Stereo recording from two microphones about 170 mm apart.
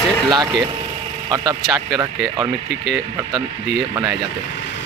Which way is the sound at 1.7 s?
20° right (ahead or behind).